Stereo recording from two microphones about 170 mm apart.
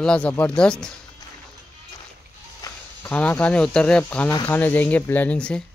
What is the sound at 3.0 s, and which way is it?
Speech, 10° left (ahead or behind).